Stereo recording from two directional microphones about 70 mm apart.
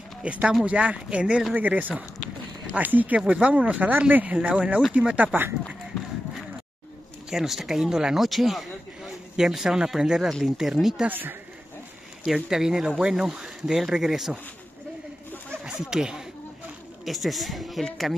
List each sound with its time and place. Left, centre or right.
0.2 s speech: centre
1.5 s speech: right
7.2 s speech: centre
11.1 s speech: right
12.3 s speech: centre
15.6 s speech: centre